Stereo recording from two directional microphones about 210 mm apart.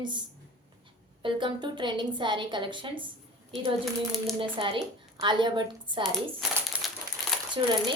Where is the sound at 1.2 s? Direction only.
20° right (ahead or behind).